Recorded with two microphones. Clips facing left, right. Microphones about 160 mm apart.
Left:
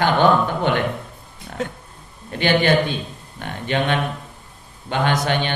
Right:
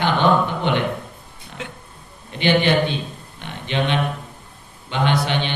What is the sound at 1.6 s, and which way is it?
Speech, 40° left (ahead or behind).